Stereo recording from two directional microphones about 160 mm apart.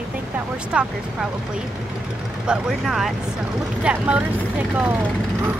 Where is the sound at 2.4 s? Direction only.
Centre (ahead or behind).